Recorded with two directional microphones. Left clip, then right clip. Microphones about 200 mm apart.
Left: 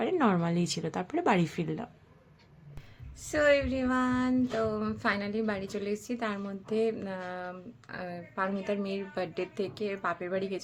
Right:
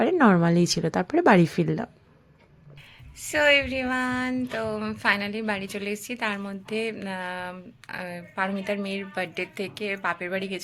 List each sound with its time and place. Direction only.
0.0 s speech: 30° right (ahead or behind)
3.3 s a woman's voice: 5° left (ahead or behind)